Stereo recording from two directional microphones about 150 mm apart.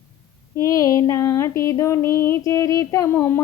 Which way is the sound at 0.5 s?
20° left (ahead or behind).